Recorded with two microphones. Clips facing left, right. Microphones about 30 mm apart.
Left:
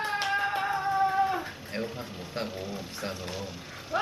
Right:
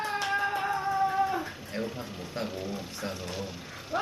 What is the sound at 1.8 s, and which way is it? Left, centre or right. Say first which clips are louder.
Speech: right 1 dB; centre.